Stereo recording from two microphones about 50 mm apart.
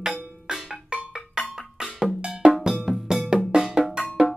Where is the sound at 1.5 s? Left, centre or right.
Centre.